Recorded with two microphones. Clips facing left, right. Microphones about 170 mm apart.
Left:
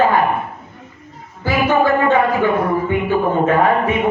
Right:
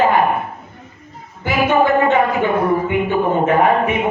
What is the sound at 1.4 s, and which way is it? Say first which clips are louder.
Music: even; 20° right (ahead or behind).